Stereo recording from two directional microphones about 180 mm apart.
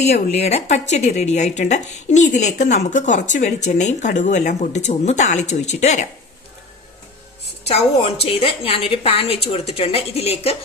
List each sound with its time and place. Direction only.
0.0 s speech: 35° left (ahead or behind)
7.6 s speech: 30° left (ahead or behind)